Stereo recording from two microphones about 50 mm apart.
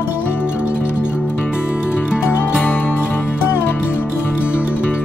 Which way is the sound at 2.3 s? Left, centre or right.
Left.